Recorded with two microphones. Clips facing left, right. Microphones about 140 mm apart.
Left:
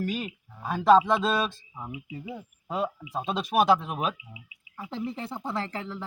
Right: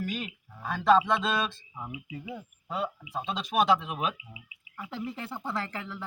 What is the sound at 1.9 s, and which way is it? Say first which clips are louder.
Speech: left 2 dB; 25° left (ahead or behind).